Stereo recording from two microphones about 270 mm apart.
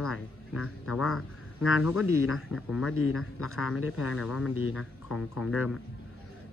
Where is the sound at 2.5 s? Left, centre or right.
Centre.